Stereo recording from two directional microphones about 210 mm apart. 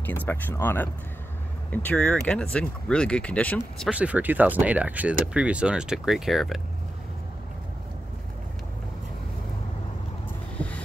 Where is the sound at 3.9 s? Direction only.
5° right (ahead or behind).